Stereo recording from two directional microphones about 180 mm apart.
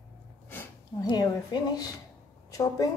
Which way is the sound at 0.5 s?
10° left (ahead or behind).